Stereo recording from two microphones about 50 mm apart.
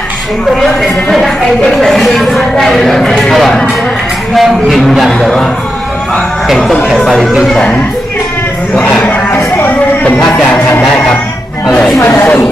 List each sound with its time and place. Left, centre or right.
1.8 s speech: centre
4.4 s speech: centre
6.9 s speech: centre
9.7 s music: left